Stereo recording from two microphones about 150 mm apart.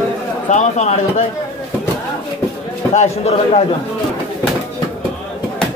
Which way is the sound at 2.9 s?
45° left (ahead or behind).